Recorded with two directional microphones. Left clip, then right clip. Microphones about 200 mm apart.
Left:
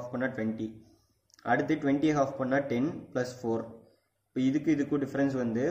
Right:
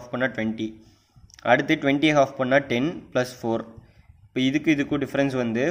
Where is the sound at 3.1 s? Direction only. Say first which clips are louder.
Right 9 dB; 35° right (ahead or behind).